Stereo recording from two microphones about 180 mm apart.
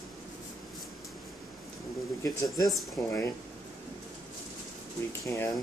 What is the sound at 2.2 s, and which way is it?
Speech, 20° left (ahead or behind).